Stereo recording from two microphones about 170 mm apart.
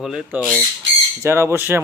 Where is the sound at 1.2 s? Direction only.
15° right (ahead or behind).